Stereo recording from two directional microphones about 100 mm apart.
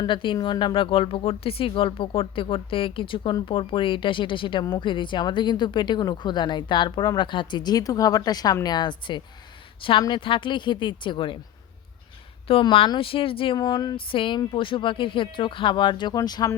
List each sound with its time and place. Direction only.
0.0 s speech: 55° left (ahead or behind)
12.5 s speech: 70° left (ahead or behind)
13.6 s speech: 45° left (ahead or behind)